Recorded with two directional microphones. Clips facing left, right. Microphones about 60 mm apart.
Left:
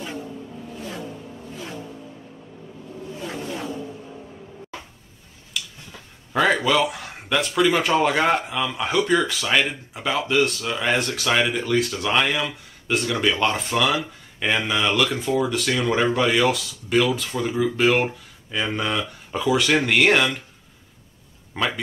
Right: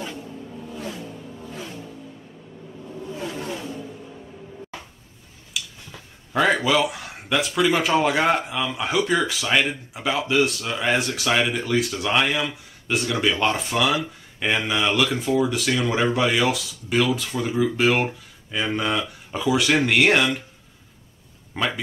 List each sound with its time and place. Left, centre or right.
5.5 s a sound: centre
8.5 s speech: centre
21.5 s speech: centre